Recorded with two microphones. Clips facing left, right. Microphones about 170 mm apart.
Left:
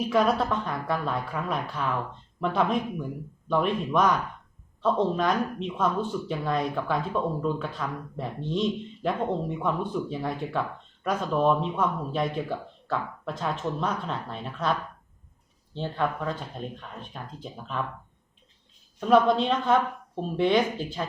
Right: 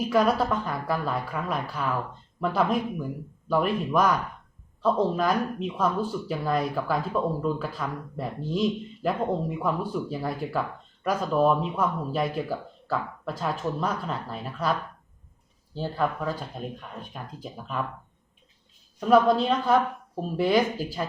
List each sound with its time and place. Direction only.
0.0 s speech: 5° right (ahead or behind)
18.9 s speech: 5° right (ahead or behind)